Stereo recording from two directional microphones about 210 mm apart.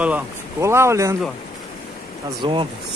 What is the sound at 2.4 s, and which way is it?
Speech, 25° right (ahead or behind).